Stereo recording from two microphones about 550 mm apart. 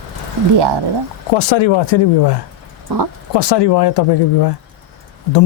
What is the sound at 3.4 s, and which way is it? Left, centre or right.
A man's voice, left.